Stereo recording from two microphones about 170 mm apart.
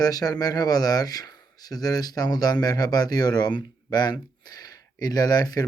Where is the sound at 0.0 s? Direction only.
20° left (ahead or behind).